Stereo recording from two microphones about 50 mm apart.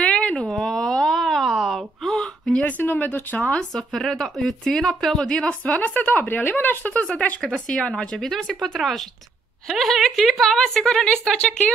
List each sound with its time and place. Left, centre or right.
0.0 s a sound: left
0.5 s a sound: centre
2.6 s speech: left
3.7 s a woman's voice: centre
5.9 s speech: left
6.9 s speech: left
7.4 s a woman's voice: centre